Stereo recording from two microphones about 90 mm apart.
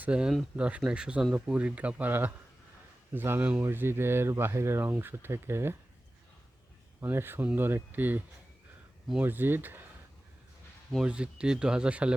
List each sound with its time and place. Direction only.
0.0 s speech: 10° right (ahead or behind); by 5.7 s 30° right (ahead or behind)
7.0 s speech: 25° right (ahead or behind)
9.2 s speech: 25° right (ahead or behind)
11.0 s speech: 10° right (ahead or behind)